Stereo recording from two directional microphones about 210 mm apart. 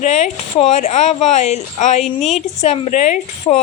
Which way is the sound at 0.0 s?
35° left (ahead or behind).